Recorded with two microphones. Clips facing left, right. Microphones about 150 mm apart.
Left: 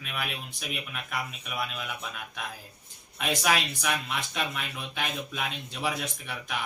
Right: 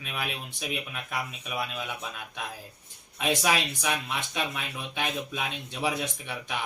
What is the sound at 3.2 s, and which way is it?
Speech, 20° right (ahead or behind).